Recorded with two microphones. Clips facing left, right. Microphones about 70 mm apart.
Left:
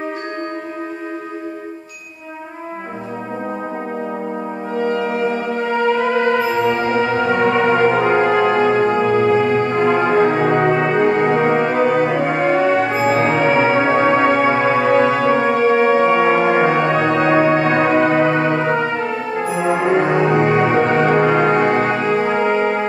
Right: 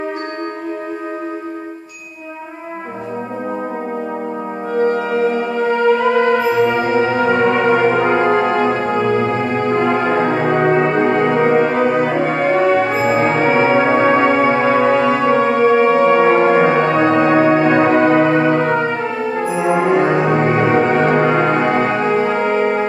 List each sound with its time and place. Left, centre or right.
4.7 s french horn: right
5.7 s music: centre
6.7 s music: centre
8.1 s brass instrument: centre
9.0 s music: centre
10.7 s brass instrument: centre
11.1 s music: centre
11.5 s music: centre
12.9 s music: centre
18.0 s music: centre
19.6 s music: centre
21.5 s music: centre
22.2 s music: centre